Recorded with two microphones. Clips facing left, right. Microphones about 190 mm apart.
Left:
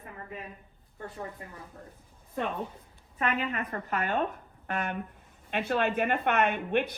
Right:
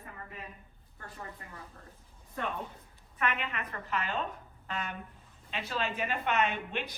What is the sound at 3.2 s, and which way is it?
A woman's voice, 40° left (ahead or behind).